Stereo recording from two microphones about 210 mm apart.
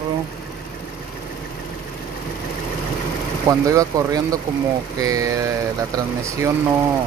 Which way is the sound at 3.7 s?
15° right (ahead or behind).